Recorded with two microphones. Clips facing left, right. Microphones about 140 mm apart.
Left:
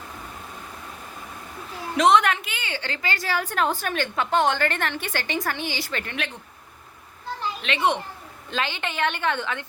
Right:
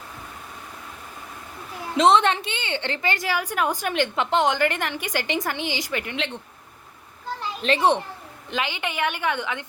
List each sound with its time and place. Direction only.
2.0 s a woman's voice: 30° right (ahead or behind)
7.6 s a child's voice: 35° right (ahead or behind)
8.4 s a woman's voice: 15° right (ahead or behind)